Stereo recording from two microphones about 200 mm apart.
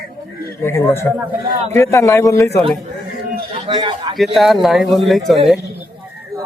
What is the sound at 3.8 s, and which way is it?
Speech, 25° right (ahead or behind).